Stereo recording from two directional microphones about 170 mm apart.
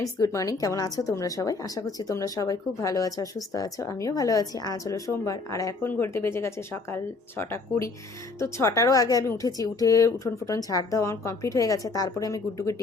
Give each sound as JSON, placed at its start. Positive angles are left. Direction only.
{"t": 0.0, "sound": "a woman's voice", "side_deg": 20}